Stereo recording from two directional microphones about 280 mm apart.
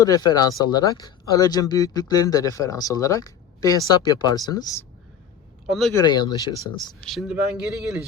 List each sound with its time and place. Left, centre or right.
0.0 s speech: centre
5.6 s speech: centre
5.9 s speech: centre
7.0 s speech: centre